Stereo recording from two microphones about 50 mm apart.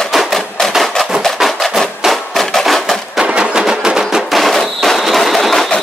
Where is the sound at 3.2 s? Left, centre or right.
Centre.